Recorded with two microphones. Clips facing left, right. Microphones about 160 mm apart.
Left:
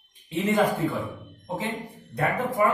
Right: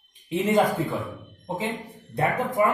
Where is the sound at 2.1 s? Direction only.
20° right (ahead or behind).